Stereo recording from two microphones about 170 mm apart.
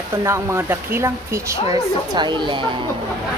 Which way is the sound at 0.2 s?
15° right (ahead or behind).